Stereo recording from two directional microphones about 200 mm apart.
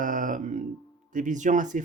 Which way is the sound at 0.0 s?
40° right (ahead or behind).